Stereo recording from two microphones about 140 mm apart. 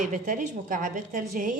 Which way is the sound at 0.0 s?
65° right (ahead or behind).